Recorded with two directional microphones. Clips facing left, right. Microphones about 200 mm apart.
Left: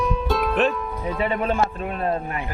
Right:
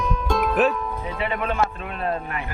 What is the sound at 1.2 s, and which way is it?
Speech, 35° left (ahead or behind).